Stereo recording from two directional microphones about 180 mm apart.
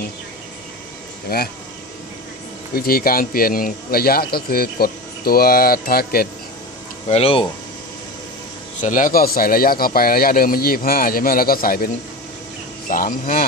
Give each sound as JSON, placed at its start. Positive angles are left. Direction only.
{"t": 1.3, "sound": "a man's voice", "side_deg": 60}
{"t": 2.7, "sound": "a man's voice", "side_deg": 55}
{"t": 7.1, "sound": "speech", "side_deg": 35}
{"t": 8.8, "sound": "speech", "side_deg": 50}